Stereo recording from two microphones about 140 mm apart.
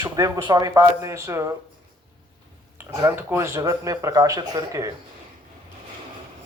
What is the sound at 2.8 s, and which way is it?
Speech, 15° right (ahead or behind).